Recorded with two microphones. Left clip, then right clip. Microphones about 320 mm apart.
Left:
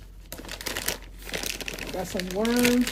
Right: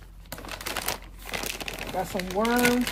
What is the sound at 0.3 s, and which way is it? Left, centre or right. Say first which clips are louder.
Crumpling: even; centre.